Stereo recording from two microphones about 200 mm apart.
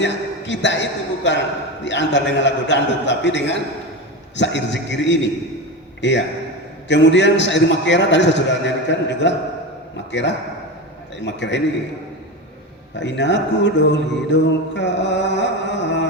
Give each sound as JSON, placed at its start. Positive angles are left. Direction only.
{"t": 0.0, "sound": "a man's voice", "side_deg": 60}
{"t": 13.0, "sound": "a man's voice", "side_deg": 60}